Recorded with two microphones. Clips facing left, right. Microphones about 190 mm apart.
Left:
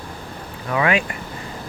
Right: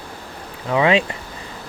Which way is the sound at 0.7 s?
25° right (ahead or behind).